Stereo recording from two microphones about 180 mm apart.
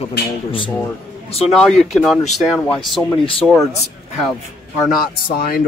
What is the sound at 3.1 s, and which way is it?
Speech, 30° left (ahead or behind).